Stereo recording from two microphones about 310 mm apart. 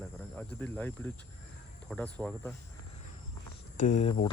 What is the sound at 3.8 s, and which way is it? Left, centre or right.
Speech, left.